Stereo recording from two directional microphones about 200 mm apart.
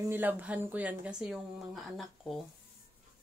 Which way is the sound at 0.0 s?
10° right (ahead or behind).